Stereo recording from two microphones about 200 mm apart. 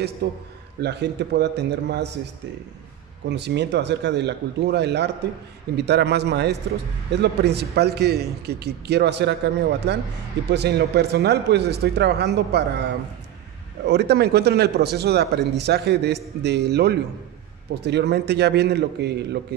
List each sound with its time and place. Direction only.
0.2 s a man's voice: 50° right (ahead or behind)
3.3 s speech: 60° right (ahead or behind)